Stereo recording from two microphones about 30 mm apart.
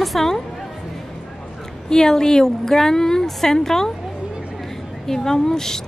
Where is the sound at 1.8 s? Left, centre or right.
Left.